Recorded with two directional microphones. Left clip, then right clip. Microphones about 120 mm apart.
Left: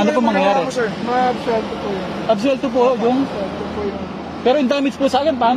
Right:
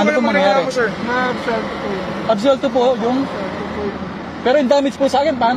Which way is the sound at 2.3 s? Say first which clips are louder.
Right 4 dB; 35° left (ahead or behind).